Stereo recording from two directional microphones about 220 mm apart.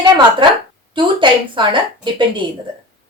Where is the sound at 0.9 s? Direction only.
20° right (ahead or behind).